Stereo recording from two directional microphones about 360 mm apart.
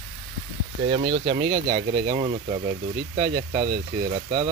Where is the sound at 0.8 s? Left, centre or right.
Centre.